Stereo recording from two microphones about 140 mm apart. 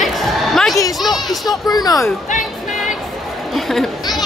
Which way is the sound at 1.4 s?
25° left (ahead or behind).